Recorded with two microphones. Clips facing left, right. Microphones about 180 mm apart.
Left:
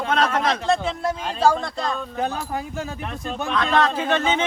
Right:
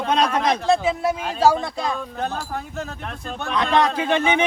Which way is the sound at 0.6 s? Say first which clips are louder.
Right 3 dB; centre (ahead or behind).